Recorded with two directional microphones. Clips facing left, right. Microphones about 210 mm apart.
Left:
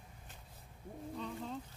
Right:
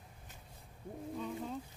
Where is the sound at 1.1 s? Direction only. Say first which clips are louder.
Right 2 dB; 5° right (ahead or behind).